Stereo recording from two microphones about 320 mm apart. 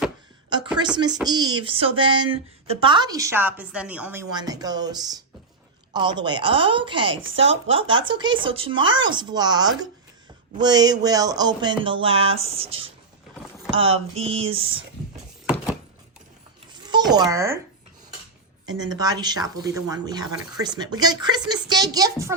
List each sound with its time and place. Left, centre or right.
0.9 s speech: centre
15.4 s a sound: centre
16.9 s a child's voice: centre
18.7 s speech: centre